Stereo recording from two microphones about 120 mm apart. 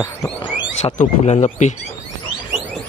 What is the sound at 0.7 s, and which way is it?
Speech, 70° left (ahead or behind).